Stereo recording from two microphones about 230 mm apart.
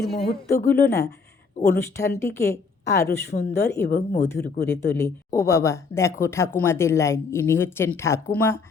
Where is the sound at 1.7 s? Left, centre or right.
Centre.